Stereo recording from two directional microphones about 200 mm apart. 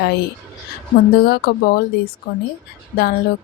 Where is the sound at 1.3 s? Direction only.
50° left (ahead or behind).